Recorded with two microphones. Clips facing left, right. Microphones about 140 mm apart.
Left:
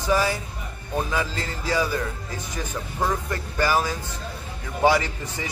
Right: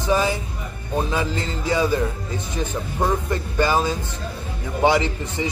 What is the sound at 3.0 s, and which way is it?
Music, 20° right (ahead or behind).